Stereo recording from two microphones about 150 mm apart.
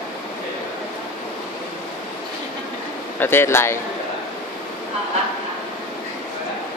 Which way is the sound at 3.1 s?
15° left (ahead or behind).